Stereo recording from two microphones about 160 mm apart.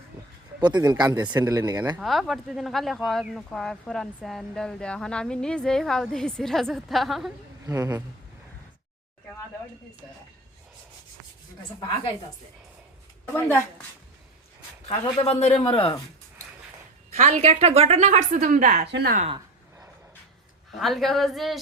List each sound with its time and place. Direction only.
0.6 s speech: 25° right (ahead or behind)
1.3 s speech: 15° right (ahead or behind)
2.0 s speech: centre (ahead or behind)
7.7 s speech: 20° right (ahead or behind)
11.8 s a woman's voice: 30° left (ahead or behind)
14.8 s a man's voice: 40° left (ahead or behind)
17.2 s a woman's voice: 45° right (ahead or behind)
18.9 s speech: 90° right
20.7 s speech: centre (ahead or behind)